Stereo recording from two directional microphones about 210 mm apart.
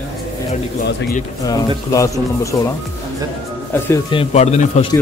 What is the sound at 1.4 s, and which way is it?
Speech, 15° left (ahead or behind).